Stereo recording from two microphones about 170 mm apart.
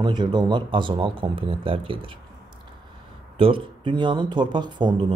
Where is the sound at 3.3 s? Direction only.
30° right (ahead or behind).